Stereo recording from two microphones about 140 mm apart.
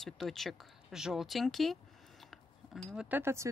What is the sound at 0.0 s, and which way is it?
Speech, centre (ahead or behind).